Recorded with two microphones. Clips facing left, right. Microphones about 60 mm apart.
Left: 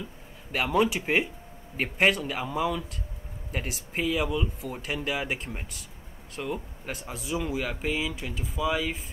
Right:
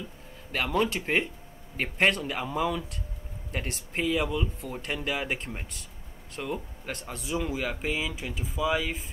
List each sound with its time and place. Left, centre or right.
0.5 s speech: centre